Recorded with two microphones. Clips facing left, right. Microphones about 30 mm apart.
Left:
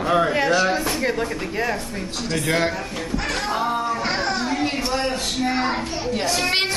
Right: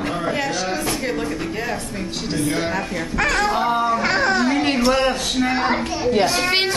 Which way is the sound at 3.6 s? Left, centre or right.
Right.